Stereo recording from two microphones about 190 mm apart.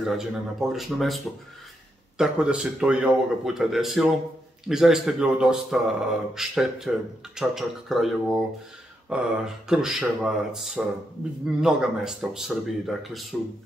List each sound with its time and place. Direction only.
0.0 s speech: centre (ahead or behind)